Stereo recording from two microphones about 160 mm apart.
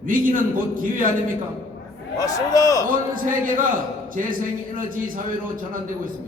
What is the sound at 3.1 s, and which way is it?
A man's voice, 55° right (ahead or behind).